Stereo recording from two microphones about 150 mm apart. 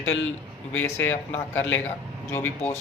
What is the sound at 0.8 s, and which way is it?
Speech, 15° left (ahead or behind).